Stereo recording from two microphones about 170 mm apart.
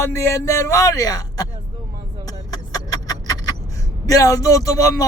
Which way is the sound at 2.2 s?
20° left (ahead or behind).